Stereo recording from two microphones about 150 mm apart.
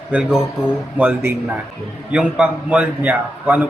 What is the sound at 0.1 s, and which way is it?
A man's voice, 5° right (ahead or behind).